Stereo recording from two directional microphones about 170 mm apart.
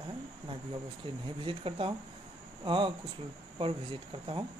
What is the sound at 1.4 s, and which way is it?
Speech, 30° right (ahead or behind).